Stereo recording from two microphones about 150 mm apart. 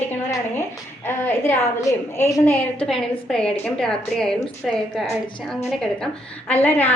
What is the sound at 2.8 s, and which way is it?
A woman's voice, 5° left (ahead or behind).